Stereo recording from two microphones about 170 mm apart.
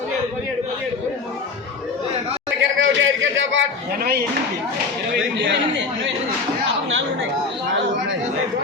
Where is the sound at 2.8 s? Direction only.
90° right.